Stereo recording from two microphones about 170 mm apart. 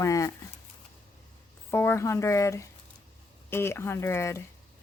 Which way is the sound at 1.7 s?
15° left (ahead or behind).